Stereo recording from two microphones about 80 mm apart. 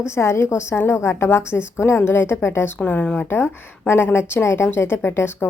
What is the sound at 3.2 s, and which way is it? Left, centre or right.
A woman's voice, left.